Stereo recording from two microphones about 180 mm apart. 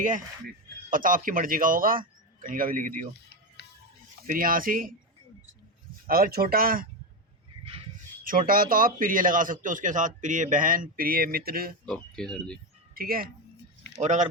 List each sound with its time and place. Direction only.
0.0 s a man's voice: 50° right (ahead or behind)
3.6 s music: 70° left (ahead or behind)
4.3 s a man's voice: 50° right (ahead or behind)
6.1 s speech: 55° right (ahead or behind)
8.2 s a man's voice: 50° right (ahead or behind)
11.9 s speech: 5° left (ahead or behind)
12.9 s speech: 55° right (ahead or behind)
14.0 s speech: 40° right (ahead or behind)